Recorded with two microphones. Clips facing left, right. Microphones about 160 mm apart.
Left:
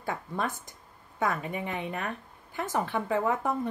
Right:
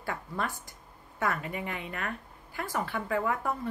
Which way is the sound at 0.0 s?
20° left (ahead or behind).